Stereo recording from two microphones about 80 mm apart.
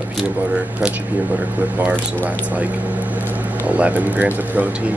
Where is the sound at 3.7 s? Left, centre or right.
Centre.